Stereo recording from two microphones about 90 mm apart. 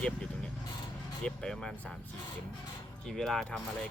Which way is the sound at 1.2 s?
5° left (ahead or behind).